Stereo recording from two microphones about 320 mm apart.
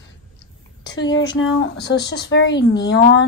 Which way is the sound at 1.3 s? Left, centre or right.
Left.